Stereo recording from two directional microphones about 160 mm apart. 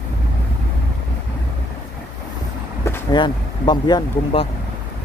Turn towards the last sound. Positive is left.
turn(degrees=30)  # may be behind; listen again after turning